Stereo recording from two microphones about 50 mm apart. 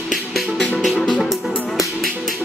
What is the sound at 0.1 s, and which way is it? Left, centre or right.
Music, centre.